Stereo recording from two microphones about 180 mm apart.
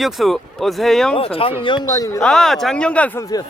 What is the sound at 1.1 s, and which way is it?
A man's voice, 30° left (ahead or behind).